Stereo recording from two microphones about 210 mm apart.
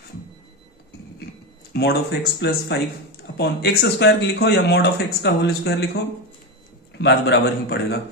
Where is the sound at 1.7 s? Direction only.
55° left (ahead or behind).